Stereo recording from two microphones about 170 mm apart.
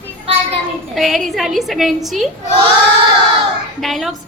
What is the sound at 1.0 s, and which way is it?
A woman's voice, centre (ahead or behind).